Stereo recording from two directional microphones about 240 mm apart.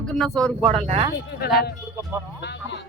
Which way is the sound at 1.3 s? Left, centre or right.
Left.